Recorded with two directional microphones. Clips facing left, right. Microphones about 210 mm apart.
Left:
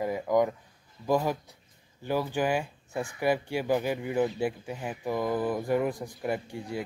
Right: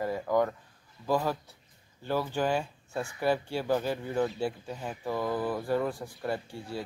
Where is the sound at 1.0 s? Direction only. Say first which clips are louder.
Left 2 dB; 15° left (ahead or behind).